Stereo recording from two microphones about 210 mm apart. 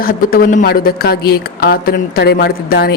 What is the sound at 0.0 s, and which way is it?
Speech, 45° left (ahead or behind).